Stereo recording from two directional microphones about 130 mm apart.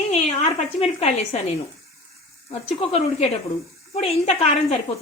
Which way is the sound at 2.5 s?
50° left (ahead or behind).